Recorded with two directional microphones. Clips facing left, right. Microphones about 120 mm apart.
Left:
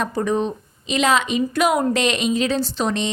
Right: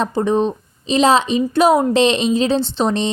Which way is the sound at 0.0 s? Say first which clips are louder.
Right 4 dB; 25° right (ahead or behind).